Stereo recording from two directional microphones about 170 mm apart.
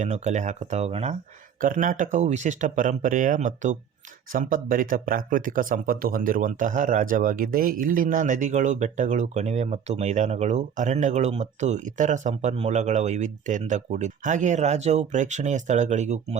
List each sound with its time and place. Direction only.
0.0 s speech: 45° right (ahead or behind)
1.6 s speech: 50° right (ahead or behind)